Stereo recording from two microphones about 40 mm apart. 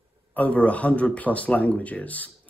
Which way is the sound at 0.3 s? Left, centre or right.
Left.